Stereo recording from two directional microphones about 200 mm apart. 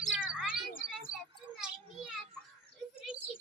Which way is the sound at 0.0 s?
40° left (ahead or behind).